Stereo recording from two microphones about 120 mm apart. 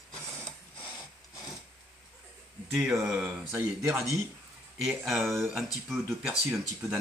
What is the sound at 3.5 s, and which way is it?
Speech, 25° right (ahead or behind).